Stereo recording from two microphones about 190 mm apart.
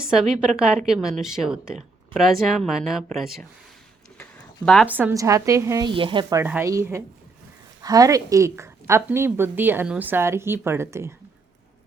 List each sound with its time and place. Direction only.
0.1 s speech: 5° right (ahead or behind)
4.2 s a sound: 5° left (ahead or behind)
4.9 s a woman's voice: 10° right (ahead or behind)
5.9 s speech: 25° right (ahead or behind)
6.4 s a woman's voice: 10° right (ahead or behind)